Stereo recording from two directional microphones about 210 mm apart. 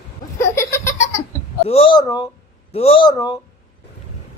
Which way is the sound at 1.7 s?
25° left (ahead or behind).